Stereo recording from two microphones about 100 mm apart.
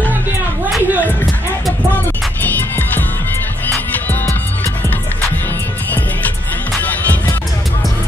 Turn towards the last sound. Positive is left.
turn(degrees=15)  # may be behind; listen again after turning